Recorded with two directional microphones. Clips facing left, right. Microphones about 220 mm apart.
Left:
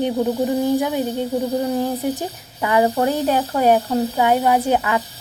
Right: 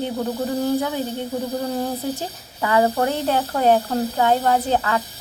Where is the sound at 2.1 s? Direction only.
15° left (ahead or behind).